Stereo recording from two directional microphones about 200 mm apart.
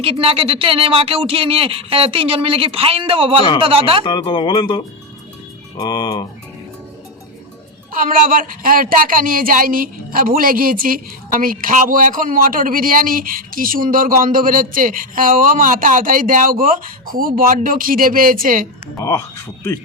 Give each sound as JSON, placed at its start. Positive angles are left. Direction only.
{"t": 0.0, "sound": "speech", "side_deg": -30}
{"t": 4.0, "sound": "speech", "side_deg": 25}
{"t": 7.9, "sound": "speech", "side_deg": -45}
{"t": 18.9, "sound": "speech", "side_deg": 15}